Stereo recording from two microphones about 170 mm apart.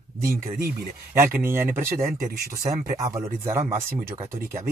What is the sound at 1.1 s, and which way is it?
Speech, 15° right (ahead or behind).